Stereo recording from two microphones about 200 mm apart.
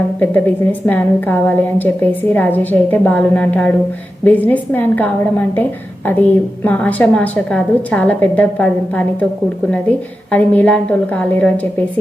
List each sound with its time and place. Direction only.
0.2 s a woman's voice: 10° left (ahead or behind)
10.3 s a woman's voice: 5° left (ahead or behind)